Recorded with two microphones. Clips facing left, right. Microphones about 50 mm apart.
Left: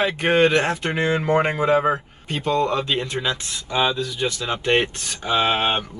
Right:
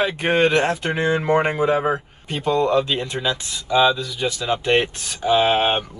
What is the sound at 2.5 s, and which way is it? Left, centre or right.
Speech, centre.